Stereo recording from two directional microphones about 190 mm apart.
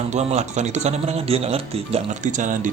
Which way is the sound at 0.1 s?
35° right (ahead or behind).